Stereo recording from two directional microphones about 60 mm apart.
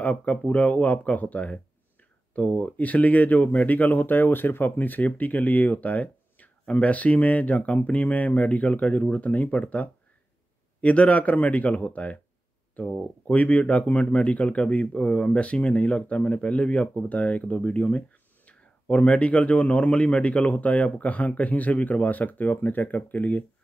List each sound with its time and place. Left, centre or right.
0.0 s speech: left